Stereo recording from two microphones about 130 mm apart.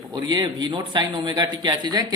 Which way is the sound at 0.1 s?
35° right (ahead or behind).